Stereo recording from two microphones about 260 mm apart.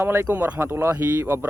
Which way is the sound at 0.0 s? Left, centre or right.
Centre.